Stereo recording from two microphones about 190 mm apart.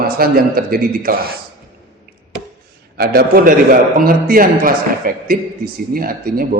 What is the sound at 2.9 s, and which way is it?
A man's voice, 55° right (ahead or behind).